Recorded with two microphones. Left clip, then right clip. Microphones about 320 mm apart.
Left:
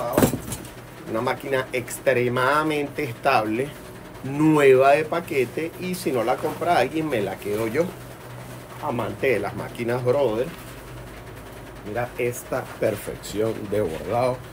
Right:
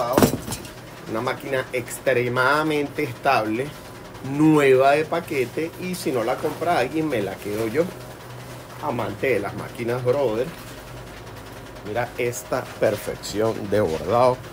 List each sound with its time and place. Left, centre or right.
1.1 s speech: centre
8.8 s speech: centre
11.9 s speech: centre